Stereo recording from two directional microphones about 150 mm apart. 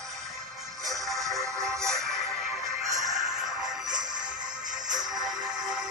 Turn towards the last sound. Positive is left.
turn(degrees=-25)  # may be behind; listen again after turning